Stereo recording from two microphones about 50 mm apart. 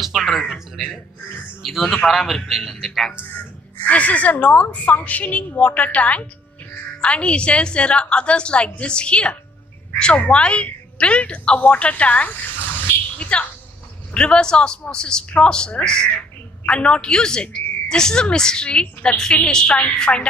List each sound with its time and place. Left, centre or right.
0.0 s a sound: centre
1.6 s a man's voice: centre
3.8 s a woman's voice: left